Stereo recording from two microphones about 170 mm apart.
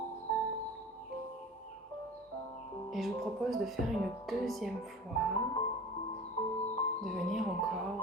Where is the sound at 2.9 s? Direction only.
Centre (ahead or behind).